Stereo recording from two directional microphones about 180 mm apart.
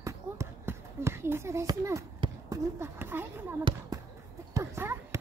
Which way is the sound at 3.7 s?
30° right (ahead or behind).